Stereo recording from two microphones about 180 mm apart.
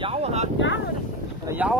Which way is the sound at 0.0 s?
35° right (ahead or behind).